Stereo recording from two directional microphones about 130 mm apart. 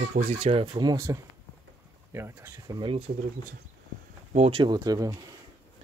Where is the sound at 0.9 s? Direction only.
25° right (ahead or behind).